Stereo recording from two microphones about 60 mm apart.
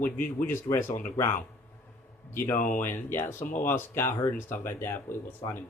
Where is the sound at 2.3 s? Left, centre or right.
Left.